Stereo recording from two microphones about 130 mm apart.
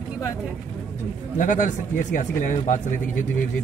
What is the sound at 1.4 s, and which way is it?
Speech, 75° left (ahead or behind).